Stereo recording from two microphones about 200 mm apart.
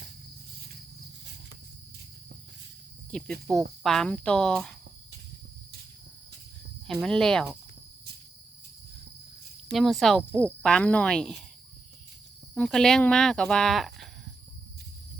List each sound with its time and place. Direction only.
3.1 s speech: 5° left (ahead or behind)
6.8 s speech: centre (ahead or behind)
9.7 s speech: centre (ahead or behind)
12.5 s speech: centre (ahead or behind)